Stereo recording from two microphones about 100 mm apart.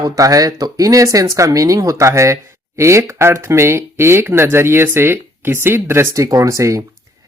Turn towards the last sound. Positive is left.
turn(degrees=-30)  # may be behind; listen again after turning